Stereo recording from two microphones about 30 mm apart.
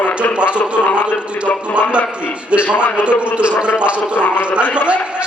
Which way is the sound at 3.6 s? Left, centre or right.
Right.